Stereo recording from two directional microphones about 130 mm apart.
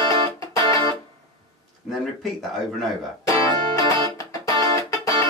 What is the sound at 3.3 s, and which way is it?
Music, 25° left (ahead or behind).